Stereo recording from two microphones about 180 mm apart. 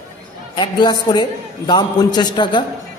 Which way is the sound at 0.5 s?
25° left (ahead or behind).